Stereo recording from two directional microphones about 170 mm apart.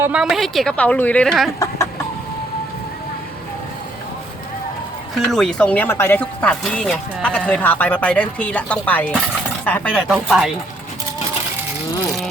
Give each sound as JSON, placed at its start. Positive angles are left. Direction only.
{"t": 0.0, "sound": "a woman's voice", "side_deg": -5}
{"t": 1.5, "sound": "chicken", "side_deg": 20}
{"t": 5.3, "sound": "a woman's voice", "side_deg": 5}